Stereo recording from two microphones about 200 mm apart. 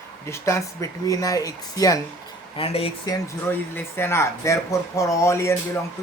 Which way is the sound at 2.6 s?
30° left (ahead or behind).